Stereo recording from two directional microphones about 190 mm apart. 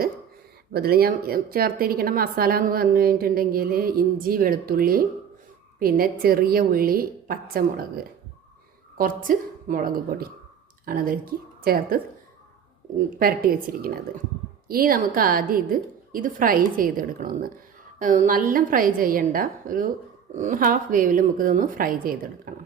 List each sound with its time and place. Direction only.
0.7 s a woman's voice: 55° right (ahead or behind)
9.0 s a woman's voice: 45° right (ahead or behind)
13.1 s a woman's voice: 50° right (ahead or behind)